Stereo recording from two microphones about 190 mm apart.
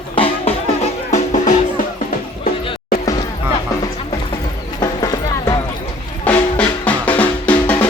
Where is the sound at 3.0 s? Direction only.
20° left (ahead or behind).